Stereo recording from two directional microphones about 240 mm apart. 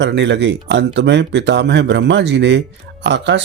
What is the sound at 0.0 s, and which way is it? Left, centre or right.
Speech, right.